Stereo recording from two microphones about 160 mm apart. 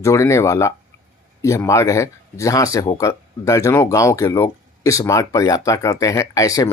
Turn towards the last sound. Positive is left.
turn(degrees=20)  # may be behind; listen again after turning